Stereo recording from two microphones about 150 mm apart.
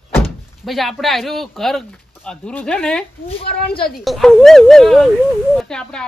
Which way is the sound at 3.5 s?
90° left.